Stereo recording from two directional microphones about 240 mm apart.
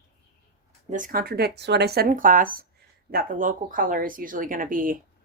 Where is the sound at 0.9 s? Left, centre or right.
Right.